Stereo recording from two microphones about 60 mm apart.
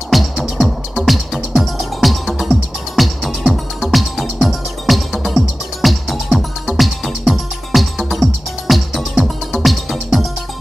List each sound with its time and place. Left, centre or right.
0.1 s music: centre